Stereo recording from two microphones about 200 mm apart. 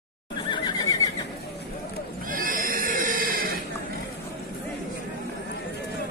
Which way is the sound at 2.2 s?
45° right (ahead or behind).